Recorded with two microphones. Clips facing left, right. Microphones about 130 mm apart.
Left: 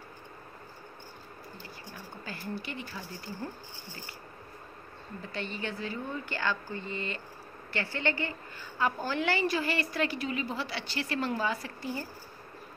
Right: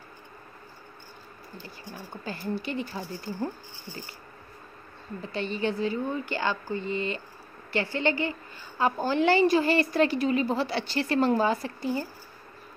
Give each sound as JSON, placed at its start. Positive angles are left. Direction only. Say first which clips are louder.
{"t": 2.2, "sound": "a woman's voice", "louder": "right 7 dB", "side_deg": -30}
{"t": 5.3, "sound": "a woman's voice", "louder": "right 8 dB", "side_deg": -20}